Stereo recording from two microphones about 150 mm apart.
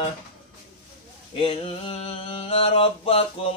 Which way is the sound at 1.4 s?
35° left (ahead or behind).